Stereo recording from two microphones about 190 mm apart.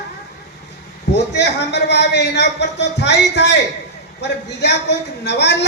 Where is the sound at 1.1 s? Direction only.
65° left (ahead or behind).